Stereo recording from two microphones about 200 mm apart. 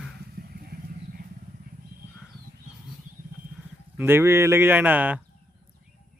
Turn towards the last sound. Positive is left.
turn(degrees=-10)  # may be behind; listen again after turning